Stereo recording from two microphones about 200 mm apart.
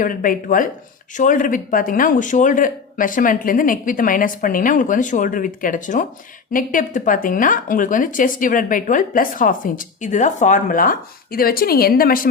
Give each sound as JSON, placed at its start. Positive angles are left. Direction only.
{"t": 0.0, "sound": "speech", "side_deg": 45}